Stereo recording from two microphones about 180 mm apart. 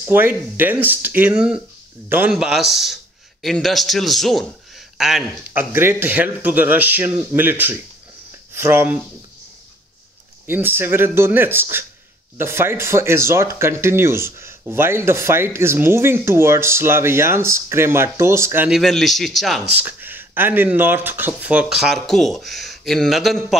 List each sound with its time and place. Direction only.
0.0 s speech: 10° right (ahead or behind)
10.4 s speech: 10° right (ahead or behind)
18.8 s speech: centre (ahead or behind)
19.8 s speech: 10° right (ahead or behind)